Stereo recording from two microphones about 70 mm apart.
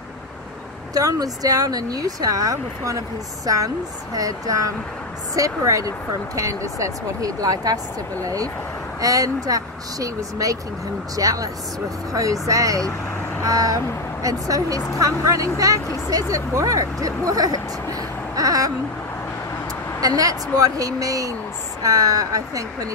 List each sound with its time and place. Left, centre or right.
0.9 s speech: right
18.3 s a sound: right
20.0 s speech: right